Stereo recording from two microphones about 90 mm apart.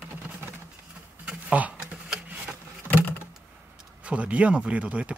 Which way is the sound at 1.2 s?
15° right (ahead or behind).